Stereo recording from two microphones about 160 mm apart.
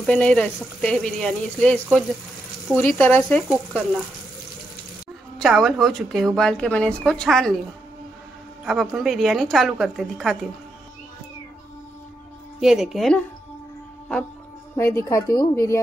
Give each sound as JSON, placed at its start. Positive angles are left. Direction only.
{"t": 0.0, "sound": "a woman's voice", "side_deg": 5}
{"t": 5.4, "sound": "speech", "side_deg": 0}
{"t": 8.6, "sound": "speech", "side_deg": 0}
{"t": 12.5, "sound": "speech", "side_deg": -5}
{"t": 14.8, "sound": "a woman's voice", "side_deg": 15}